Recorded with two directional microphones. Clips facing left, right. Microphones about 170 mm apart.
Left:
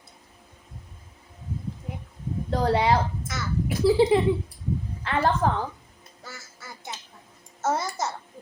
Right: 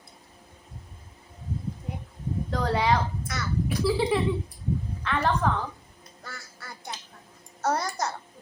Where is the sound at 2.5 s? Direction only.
25° left (ahead or behind).